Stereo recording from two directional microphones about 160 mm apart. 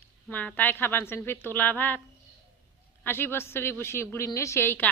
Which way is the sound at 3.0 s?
15° left (ahead or behind).